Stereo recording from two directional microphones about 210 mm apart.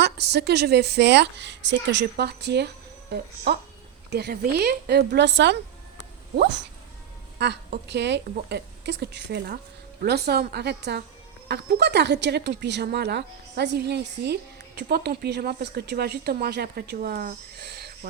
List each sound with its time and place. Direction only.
0.0 s speech: 50° right (ahead or behind)